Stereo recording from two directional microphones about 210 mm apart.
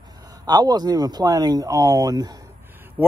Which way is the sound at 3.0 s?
10° right (ahead or behind).